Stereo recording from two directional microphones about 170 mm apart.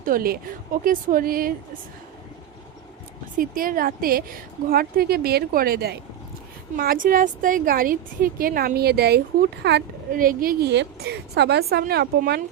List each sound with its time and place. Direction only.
0.0 s a woman's voice: 60° right (ahead or behind)
3.3 s a woman's voice: 55° right (ahead or behind); by 9.8 s 80° right
10.1 s a woman's voice: 55° right (ahead or behind); by 12.4 s 70° right (ahead or behind)